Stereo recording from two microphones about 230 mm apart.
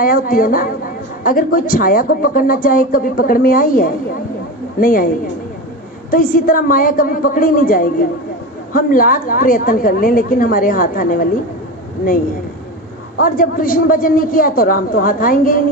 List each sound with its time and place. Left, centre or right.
0.0 s a woman's voice: left
6.1 s a woman's voice: left
13.1 s a woman's voice: left